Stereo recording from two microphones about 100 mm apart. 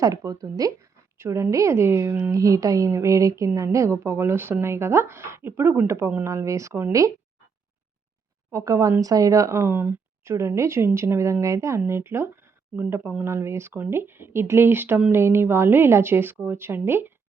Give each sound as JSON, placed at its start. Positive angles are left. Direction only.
{"t": 0.0, "sound": "a woman's voice", "side_deg": -35}
{"t": 8.5, "sound": "speech", "side_deg": -30}